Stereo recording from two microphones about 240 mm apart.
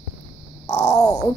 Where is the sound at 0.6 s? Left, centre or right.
Centre.